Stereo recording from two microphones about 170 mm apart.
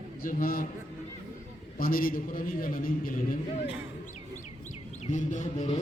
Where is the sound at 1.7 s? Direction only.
60° left (ahead or behind).